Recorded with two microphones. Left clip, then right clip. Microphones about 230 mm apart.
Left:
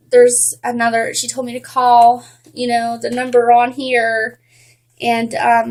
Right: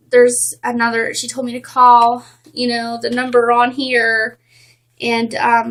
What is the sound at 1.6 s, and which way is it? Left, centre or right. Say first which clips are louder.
Speech: right 3 dB; right.